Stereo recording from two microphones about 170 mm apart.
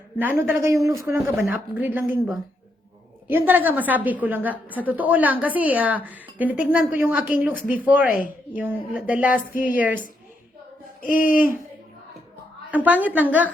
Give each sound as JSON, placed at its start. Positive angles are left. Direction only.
{"t": 0.2, "sound": "a woman's voice", "side_deg": -10}
{"t": 11.0, "sound": "speech", "side_deg": 55}
{"t": 12.7, "sound": "a woman's voice", "side_deg": -10}